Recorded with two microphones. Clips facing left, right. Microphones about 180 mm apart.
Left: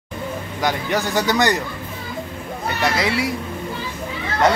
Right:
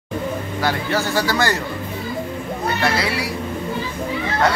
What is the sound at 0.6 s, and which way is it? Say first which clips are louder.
Speech: left 1 dB; 15° left (ahead or behind).